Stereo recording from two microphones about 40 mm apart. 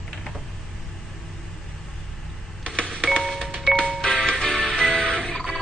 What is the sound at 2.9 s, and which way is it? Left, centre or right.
Music, centre.